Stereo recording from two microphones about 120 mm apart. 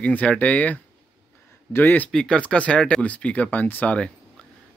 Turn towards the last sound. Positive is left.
turn(degrees=10)  # may be behind; listen again after turning